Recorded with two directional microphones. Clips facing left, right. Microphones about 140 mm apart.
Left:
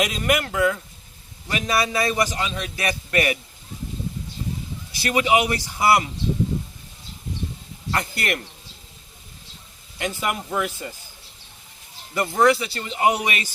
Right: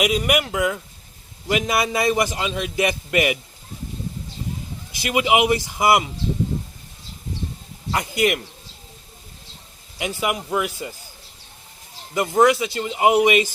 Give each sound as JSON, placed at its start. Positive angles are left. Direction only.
{"t": 0.0, "sound": "a man's voice", "side_deg": -10}
{"t": 4.9, "sound": "speech", "side_deg": -15}
{"t": 7.9, "sound": "speech", "side_deg": -15}
{"t": 10.0, "sound": "speech", "side_deg": -10}
{"t": 12.1, "sound": "speech", "side_deg": -15}